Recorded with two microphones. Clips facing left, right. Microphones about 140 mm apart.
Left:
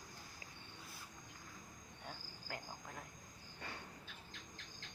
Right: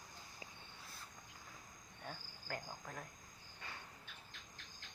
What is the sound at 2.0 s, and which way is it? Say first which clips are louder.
Cricket: right 2 dB; 15° left (ahead or behind).